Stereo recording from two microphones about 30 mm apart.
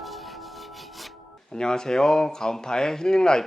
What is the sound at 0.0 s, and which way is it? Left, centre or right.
Music, centre.